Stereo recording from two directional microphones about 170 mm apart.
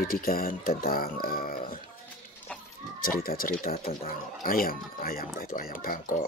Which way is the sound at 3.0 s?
60° left (ahead or behind).